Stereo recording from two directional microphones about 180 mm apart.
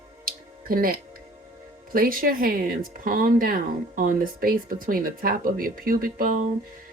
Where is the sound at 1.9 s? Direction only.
50° right (ahead or behind).